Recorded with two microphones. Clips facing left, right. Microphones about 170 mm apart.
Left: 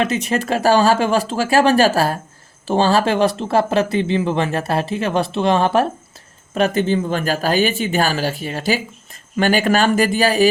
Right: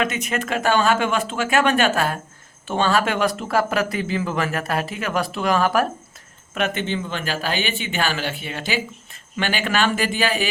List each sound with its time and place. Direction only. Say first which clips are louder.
0.0 s speech: left 4 dB; 30° left (ahead or behind)